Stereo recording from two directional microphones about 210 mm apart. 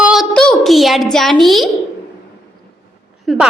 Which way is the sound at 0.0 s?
Centre (ahead or behind).